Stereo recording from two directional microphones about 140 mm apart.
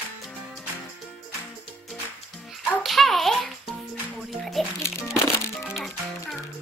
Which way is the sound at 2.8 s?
Centre (ahead or behind).